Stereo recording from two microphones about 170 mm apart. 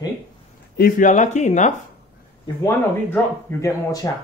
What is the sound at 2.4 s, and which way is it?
Speech, 15° left (ahead or behind).